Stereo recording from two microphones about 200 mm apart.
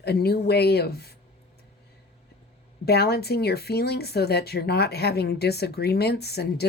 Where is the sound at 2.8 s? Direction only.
55° left (ahead or behind).